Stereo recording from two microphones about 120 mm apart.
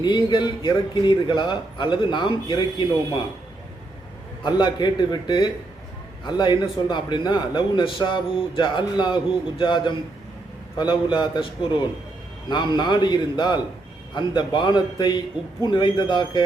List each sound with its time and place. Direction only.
0.0 s a man's voice: 40° left (ahead or behind)
4.4 s a man's voice: 40° left (ahead or behind)